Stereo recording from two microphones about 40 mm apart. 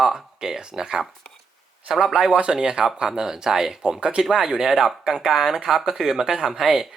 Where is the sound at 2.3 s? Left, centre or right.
Right.